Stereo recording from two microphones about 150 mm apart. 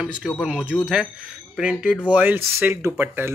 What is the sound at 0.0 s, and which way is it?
Speech, 5° right (ahead or behind).